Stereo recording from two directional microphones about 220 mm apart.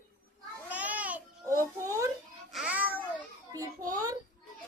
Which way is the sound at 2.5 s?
5° right (ahead or behind).